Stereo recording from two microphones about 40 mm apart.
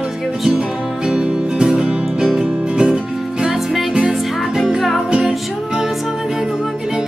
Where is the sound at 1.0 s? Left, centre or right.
Centre.